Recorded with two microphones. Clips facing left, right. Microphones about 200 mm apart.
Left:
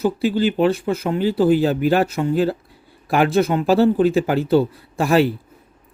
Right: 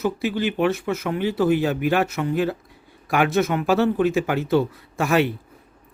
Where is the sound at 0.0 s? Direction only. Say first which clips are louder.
Left 5 dB; 30° left (ahead or behind).